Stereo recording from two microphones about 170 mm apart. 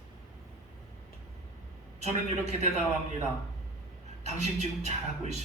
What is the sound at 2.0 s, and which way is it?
Speech, 40° right (ahead or behind).